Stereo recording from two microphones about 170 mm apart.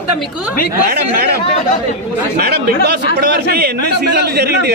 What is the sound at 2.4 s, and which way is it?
A man's voice, 75° right (ahead or behind).